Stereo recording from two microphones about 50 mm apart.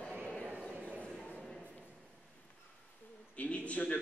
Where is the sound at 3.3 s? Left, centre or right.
Left.